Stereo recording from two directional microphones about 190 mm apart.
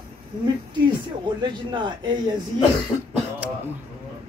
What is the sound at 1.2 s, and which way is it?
Speech, 25° right (ahead or behind).